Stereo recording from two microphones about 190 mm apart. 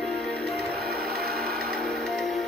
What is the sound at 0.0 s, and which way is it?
Music, centre (ahead or behind).